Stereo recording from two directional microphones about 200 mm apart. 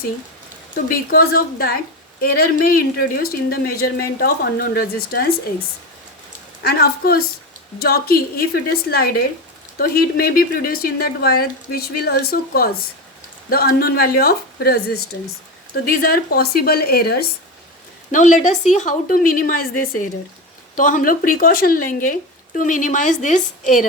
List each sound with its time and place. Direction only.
0.9 s speech: 45° left (ahead or behind)
6.6 s speech: 50° left (ahead or behind)
18.1 s a woman's voice: 40° left (ahead or behind)